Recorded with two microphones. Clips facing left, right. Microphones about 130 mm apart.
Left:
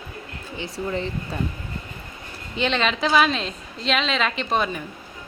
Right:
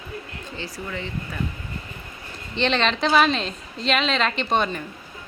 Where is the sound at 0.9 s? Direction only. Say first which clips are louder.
Left 4 dB; 35° left (ahead or behind).